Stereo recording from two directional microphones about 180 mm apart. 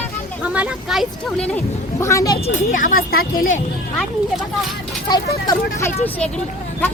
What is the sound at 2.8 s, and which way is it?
Speech, 50° left (ahead or behind).